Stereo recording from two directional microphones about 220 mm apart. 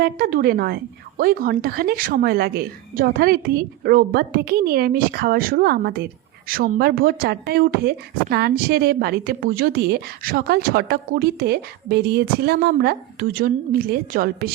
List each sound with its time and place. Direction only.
0.0 s speech: 40° right (ahead or behind)